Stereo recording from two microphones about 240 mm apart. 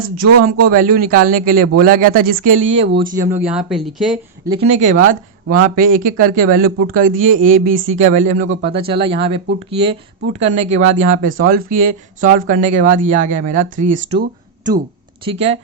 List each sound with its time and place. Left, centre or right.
0.7 s speech: right
3.0 s speech: centre
4.4 s speech: right